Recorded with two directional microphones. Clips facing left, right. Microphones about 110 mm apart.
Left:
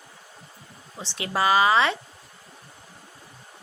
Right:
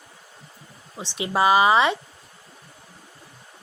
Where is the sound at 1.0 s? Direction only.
20° right (ahead or behind).